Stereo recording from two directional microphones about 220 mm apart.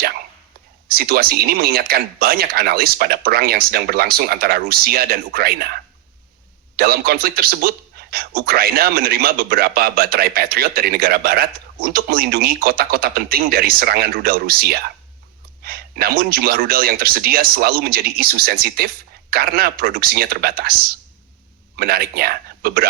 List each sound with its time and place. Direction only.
0.9 s speech: 45° right (ahead or behind)
6.7 s speech: 45° right (ahead or behind)
21.8 s speech: 45° right (ahead or behind)